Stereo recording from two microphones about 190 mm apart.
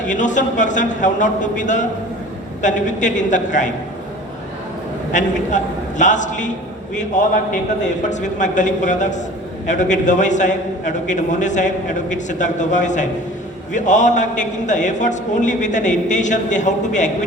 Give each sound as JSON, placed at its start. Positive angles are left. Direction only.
{"t": 0.0, "sound": "a man's voice", "side_deg": 40}
{"t": 5.1, "sound": "a man's voice", "side_deg": 40}